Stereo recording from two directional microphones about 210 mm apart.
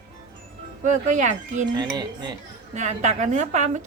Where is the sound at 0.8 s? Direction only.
35° right (ahead or behind).